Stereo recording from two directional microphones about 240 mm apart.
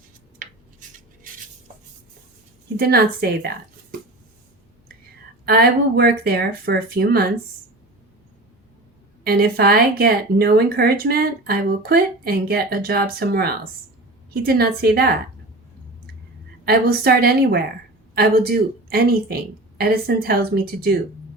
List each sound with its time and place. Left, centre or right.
0.3 s a sound: right
2.7 s speech: right
5.5 s speech: right
9.2 s speech: right
16.6 s speech: right